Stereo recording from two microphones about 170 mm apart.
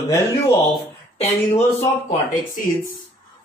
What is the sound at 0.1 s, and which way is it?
Speech, 20° left (ahead or behind).